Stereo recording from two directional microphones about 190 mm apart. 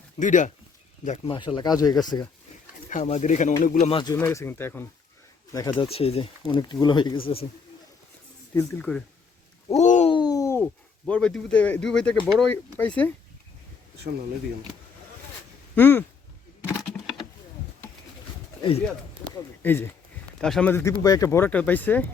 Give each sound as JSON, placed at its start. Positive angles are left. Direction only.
{"t": 0.2, "sound": "speech", "side_deg": 40}
{"t": 2.9, "sound": "speech", "side_deg": 35}
{"t": 4.2, "sound": "speech", "side_deg": 10}
{"t": 5.7, "sound": "speech", "side_deg": 30}
{"t": 8.5, "sound": "speech", "side_deg": 5}
{"t": 9.7, "sound": "a sound", "side_deg": 40}
{"t": 10.1, "sound": "a sound", "side_deg": 20}
{"t": 12.2, "sound": "speech", "side_deg": 5}
{"t": 15.7, "sound": "speech", "side_deg": 10}
{"t": 19.2, "sound": "a sound", "side_deg": 90}
{"t": 19.6, "sound": "speech", "side_deg": 10}